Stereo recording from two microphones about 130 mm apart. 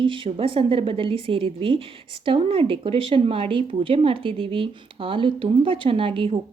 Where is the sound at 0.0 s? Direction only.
40° right (ahead or behind).